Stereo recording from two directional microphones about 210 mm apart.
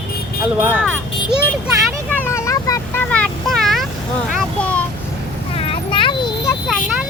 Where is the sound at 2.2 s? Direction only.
15° left (ahead or behind).